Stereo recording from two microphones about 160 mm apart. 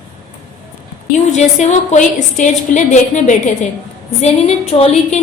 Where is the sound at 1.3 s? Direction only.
45° left (ahead or behind).